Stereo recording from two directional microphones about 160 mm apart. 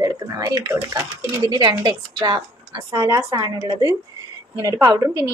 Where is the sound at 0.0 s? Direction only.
25° right (ahead or behind).